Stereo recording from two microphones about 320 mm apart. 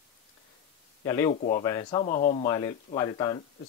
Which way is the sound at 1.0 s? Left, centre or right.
Centre.